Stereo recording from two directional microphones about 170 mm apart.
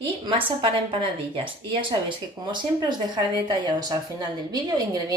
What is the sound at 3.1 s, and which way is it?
A woman's voice, 25° right (ahead or behind).